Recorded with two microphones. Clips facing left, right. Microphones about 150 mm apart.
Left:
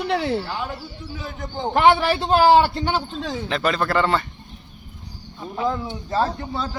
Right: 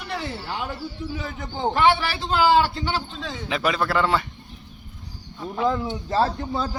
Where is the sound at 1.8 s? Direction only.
45° left (ahead or behind).